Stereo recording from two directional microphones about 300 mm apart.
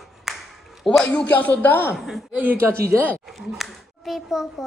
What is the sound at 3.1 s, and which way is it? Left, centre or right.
A child's voice, centre.